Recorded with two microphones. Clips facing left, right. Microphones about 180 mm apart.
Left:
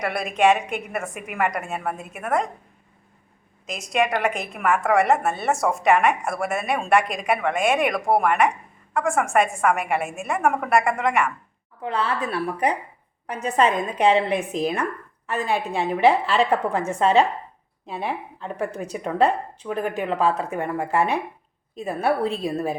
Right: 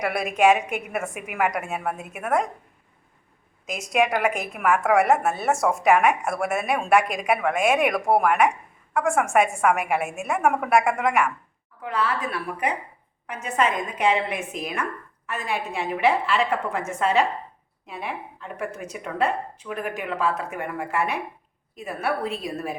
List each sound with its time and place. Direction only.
0.0 s a woman's voice: 5° right (ahead or behind)
3.7 s a woman's voice: 5° right (ahead or behind)
11.8 s a woman's voice: 30° left (ahead or behind)